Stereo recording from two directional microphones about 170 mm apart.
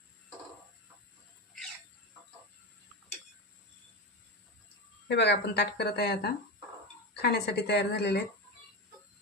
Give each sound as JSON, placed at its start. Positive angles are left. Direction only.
{"t": 5.0, "sound": "speech", "side_deg": 80}